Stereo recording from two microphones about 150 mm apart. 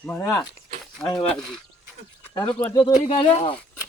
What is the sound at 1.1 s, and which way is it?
Speech, 35° left (ahead or behind).